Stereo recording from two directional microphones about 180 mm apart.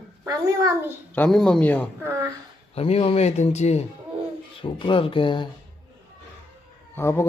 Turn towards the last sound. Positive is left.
turn(degrees=15)  # may be behind; listen again after turning